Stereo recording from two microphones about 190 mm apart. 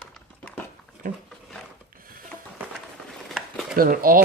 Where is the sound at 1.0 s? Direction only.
45° right (ahead or behind).